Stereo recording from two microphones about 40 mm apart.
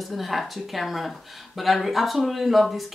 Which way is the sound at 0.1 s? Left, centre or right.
Centre.